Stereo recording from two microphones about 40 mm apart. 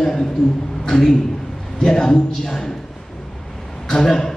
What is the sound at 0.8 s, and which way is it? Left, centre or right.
A man's voice, centre.